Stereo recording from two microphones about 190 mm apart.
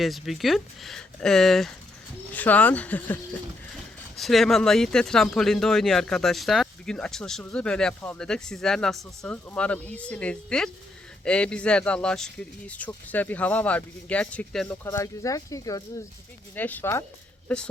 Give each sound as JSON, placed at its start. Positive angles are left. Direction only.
{"t": 0.0, "sound": "speech", "side_deg": 0}
{"t": 4.2, "sound": "speech", "side_deg": 0}
{"t": 14.8, "sound": "speech", "side_deg": 15}